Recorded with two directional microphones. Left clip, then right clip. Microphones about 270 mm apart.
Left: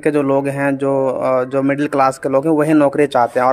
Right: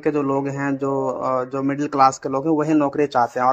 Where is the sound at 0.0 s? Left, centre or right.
Left.